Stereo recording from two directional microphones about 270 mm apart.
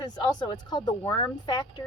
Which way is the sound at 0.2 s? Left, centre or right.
Centre.